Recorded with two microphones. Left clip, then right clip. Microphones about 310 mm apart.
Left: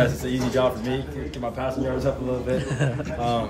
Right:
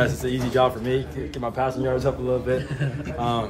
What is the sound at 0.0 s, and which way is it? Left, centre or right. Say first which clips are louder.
A man's voice: even; centre.